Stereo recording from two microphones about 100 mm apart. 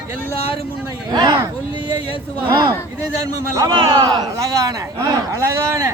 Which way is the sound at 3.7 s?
45° right (ahead or behind).